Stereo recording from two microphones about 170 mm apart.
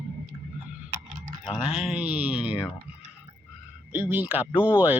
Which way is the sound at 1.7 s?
5° right (ahead or behind).